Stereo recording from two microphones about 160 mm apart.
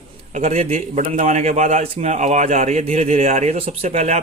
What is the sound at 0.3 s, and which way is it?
A man's voice, 45° right (ahead or behind).